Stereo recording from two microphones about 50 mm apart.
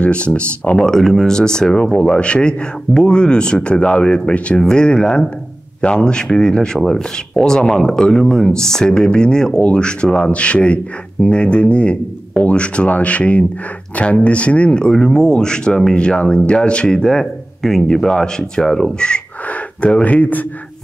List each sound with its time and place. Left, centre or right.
0.0 s speech: left